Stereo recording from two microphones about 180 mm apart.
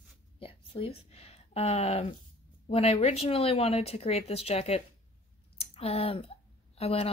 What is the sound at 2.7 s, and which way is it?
Speech, 35° left (ahead or behind).